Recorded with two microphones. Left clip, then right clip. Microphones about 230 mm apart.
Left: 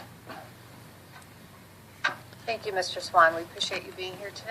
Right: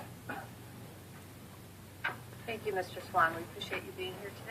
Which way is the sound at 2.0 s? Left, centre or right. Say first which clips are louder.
Left 8 dB; left.